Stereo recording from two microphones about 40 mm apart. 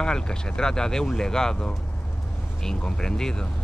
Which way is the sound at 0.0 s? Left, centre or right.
Centre.